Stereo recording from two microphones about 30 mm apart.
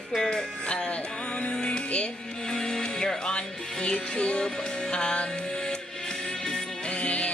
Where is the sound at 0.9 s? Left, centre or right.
Left.